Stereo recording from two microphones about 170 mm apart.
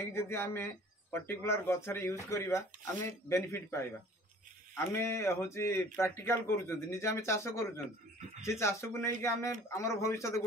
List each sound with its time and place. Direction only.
0.0 s speech: 15° left (ahead or behind)